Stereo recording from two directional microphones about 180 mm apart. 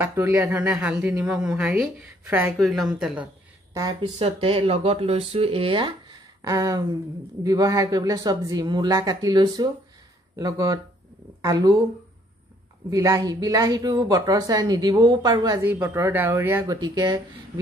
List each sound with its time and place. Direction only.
0.0 s a woman's voice: 15° right (ahead or behind)
2.5 s a woman's voice: centre (ahead or behind)
4.2 s speech: 30° right (ahead or behind)
12.9 s speech: 20° right (ahead or behind)
15.6 s speech: 10° right (ahead or behind)